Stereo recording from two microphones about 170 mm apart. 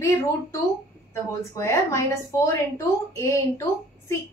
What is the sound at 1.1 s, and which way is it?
A woman's voice, 15° left (ahead or behind).